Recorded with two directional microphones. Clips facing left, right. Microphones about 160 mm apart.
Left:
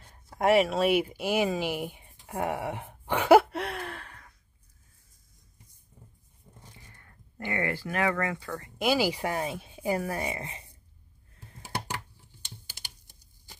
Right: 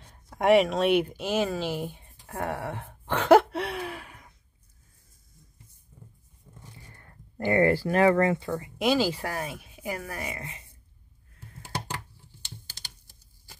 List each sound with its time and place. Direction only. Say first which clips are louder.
0.0 s speech: right 1 dB; 5° left (ahead or behind)
7.0 s speech: right 7 dB; 35° right (ahead or behind)
8.5 s speech: right 6 dB; 15° right (ahead or behind)
8.7 s speech: right 1 dB; 5° left (ahead or behind); by 10.6 s 30° left (ahead or behind)
12.3 s a sound: right 2 dB; 15° left (ahead or behind)